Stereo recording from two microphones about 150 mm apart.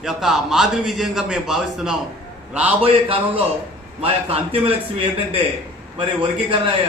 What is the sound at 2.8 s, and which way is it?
A man's voice, 40° right (ahead or behind).